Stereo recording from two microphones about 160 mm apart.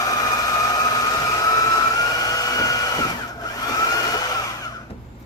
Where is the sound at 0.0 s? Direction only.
25° left (ahead or behind).